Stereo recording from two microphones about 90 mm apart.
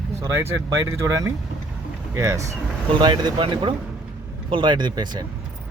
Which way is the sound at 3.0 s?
55° right (ahead or behind).